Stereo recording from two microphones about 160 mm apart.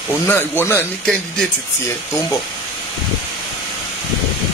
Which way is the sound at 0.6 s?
10° left (ahead or behind).